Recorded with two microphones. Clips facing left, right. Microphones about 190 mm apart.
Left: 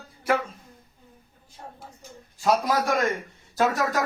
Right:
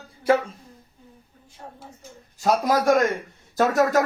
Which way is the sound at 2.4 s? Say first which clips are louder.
Right 2 dB; 40° right (ahead or behind).